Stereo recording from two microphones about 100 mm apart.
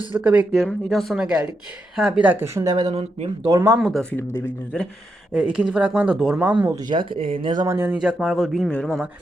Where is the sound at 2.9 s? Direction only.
90° right.